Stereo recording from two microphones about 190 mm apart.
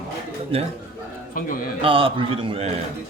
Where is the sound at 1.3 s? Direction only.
45° left (ahead or behind).